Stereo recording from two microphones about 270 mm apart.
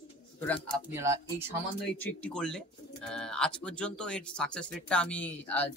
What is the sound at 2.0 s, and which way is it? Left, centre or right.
Speech, centre.